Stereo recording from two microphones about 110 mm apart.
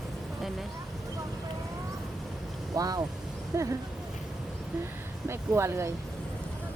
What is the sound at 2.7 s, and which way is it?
Speech, 35° right (ahead or behind).